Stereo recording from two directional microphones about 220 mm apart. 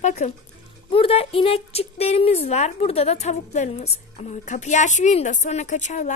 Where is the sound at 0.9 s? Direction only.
25° left (ahead or behind).